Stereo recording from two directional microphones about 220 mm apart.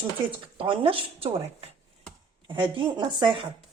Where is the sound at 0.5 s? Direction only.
25° right (ahead or behind).